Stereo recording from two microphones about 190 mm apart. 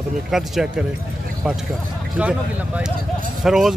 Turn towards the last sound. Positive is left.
turn(degrees=0)  # may be behind; listen again after turning